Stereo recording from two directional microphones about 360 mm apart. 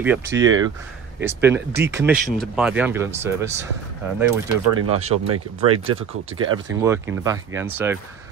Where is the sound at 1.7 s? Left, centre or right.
Right.